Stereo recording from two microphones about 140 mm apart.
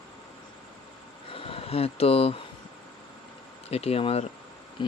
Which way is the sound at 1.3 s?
40° left (ahead or behind).